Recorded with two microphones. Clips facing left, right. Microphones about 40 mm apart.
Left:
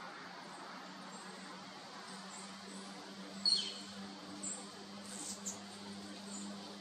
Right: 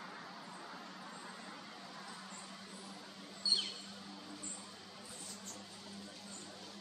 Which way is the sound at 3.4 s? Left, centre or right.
Right.